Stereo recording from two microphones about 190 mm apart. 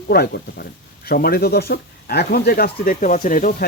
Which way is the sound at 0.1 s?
55° left (ahead or behind).